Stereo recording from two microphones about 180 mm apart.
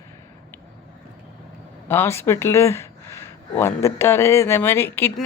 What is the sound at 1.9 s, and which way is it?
Speech, 15° left (ahead or behind).